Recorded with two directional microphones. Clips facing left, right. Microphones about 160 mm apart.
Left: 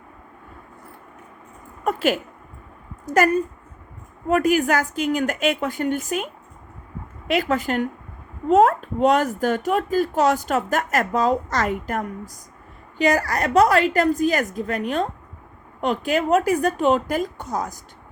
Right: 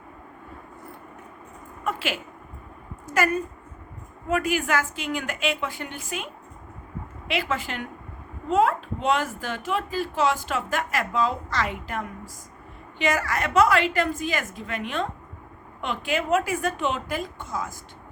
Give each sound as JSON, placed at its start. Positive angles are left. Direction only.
{"t": 1.8, "sound": "a child's voice", "side_deg": 40}